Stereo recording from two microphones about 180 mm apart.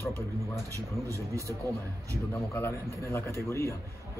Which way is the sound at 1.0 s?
15° right (ahead or behind).